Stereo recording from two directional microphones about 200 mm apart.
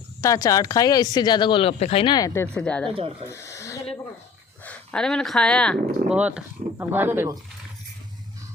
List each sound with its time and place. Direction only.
0.2 s speech: 15° left (ahead or behind)
3.2 s a sound: 15° left (ahead or behind)
4.6 s speech: 5° left (ahead or behind)
6.1 s speech: 5° right (ahead or behind)